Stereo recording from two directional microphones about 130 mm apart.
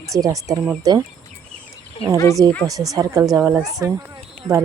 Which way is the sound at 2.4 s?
30° right (ahead or behind).